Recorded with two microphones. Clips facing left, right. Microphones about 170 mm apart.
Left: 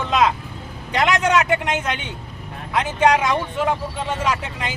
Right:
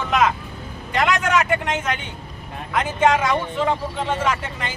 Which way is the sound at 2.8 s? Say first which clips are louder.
Left 1 dB; 15° left (ahead or behind).